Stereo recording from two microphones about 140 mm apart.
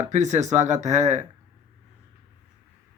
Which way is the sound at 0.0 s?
55° right (ahead or behind).